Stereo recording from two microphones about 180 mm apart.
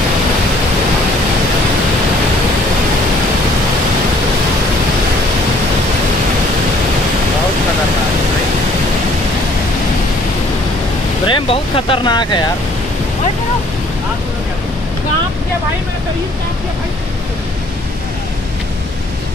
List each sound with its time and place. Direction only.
11.2 s speech: 30° left (ahead or behind)